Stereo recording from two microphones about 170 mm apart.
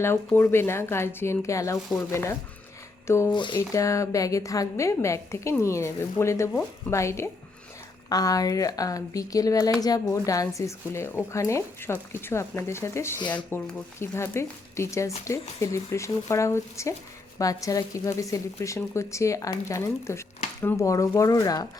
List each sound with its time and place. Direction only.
0.0 s a woman's voice: 15° left (ahead or behind)
3.3 s a woman's voice: 25° left (ahead or behind)